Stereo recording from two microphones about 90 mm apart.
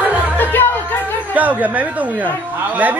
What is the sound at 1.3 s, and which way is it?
Speech, 15° right (ahead or behind).